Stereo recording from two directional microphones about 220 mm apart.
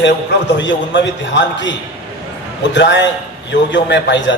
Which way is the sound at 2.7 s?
55° left (ahead or behind).